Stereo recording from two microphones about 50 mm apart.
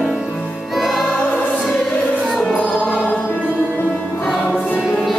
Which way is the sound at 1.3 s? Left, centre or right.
Left.